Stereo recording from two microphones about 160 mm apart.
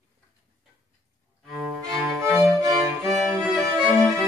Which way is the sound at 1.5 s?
5° right (ahead or behind).